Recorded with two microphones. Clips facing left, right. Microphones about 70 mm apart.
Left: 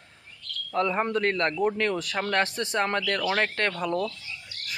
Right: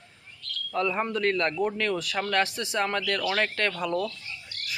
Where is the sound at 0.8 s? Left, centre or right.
Left.